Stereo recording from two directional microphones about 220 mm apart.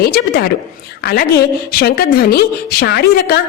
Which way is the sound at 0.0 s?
45° left (ahead or behind).